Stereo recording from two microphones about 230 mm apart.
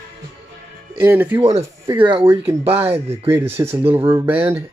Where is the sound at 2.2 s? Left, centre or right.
Centre.